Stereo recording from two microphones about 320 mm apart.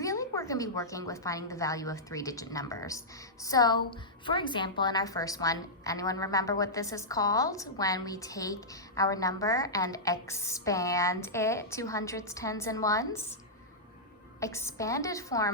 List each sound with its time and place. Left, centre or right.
0.0 s a woman's voice: centre
14.4 s a woman's voice: centre